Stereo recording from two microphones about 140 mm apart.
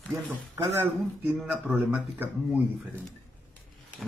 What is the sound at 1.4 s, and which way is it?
Speech, 5° right (ahead or behind).